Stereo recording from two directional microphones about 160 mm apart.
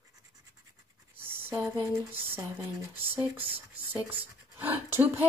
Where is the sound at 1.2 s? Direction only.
15° right (ahead or behind).